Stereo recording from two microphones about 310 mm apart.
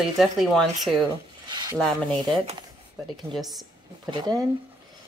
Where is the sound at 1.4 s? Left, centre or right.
Centre.